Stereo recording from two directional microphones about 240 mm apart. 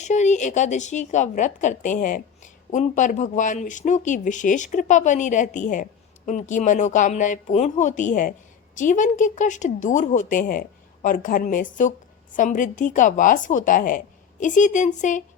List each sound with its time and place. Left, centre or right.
0.0 s a woman's voice: left